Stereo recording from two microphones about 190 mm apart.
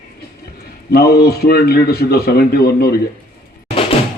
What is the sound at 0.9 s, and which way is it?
A man's voice, 55° left (ahead or behind).